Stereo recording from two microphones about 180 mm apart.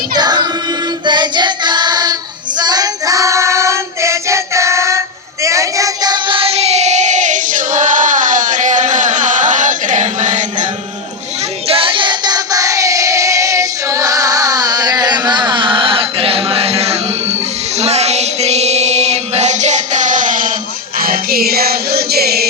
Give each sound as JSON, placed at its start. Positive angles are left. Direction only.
{"t": 0.1, "sound": "music", "side_deg": -20}
{"t": 1.0, "sound": "child singing", "side_deg": -25}
{"t": 11.7, "sound": "singing", "side_deg": -30}
{"t": 17.7, "sound": "music", "side_deg": -35}